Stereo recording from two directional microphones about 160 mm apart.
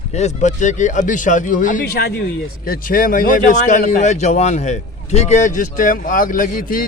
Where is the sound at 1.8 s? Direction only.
75° left (ahead or behind).